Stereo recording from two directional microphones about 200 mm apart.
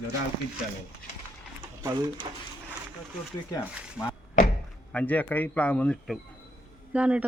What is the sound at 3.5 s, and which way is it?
Speech, 15° left (ahead or behind).